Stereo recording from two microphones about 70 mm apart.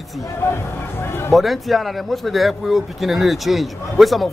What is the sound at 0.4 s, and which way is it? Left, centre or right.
Speech, left.